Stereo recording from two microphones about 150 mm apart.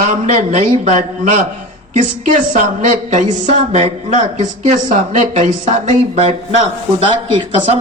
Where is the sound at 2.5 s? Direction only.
55° right (ahead or behind).